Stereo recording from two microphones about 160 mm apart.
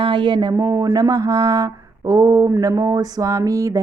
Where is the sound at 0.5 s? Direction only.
15° right (ahead or behind).